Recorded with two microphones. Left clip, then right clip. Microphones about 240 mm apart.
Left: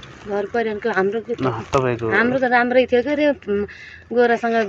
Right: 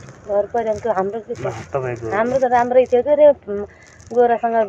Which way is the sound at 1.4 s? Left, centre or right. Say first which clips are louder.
Left 5 dB; left.